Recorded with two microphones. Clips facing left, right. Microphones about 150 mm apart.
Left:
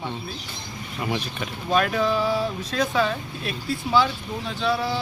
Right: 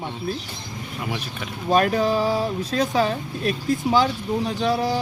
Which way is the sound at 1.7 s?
40° right (ahead or behind).